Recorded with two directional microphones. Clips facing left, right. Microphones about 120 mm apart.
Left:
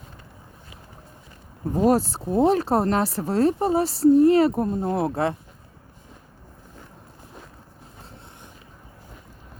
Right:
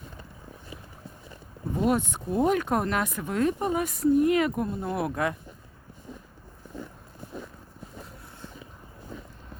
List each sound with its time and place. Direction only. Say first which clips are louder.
1.7 s speech: left 6 dB; 35° left (ahead or behind)